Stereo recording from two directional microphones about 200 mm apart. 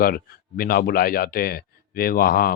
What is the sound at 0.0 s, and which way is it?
Speech, 45° left (ahead or behind).